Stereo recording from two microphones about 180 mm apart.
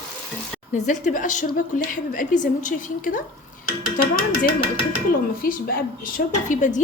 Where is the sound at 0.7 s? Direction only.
45° left (ahead or behind).